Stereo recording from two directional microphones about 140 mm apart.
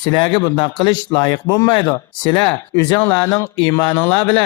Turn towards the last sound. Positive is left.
turn(degrees=15)  # may be behind; listen again after turning